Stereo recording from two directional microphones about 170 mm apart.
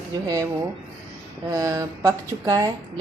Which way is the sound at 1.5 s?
20° right (ahead or behind).